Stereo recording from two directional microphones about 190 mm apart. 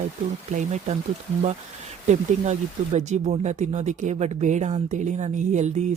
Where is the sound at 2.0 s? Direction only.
40° right (ahead or behind).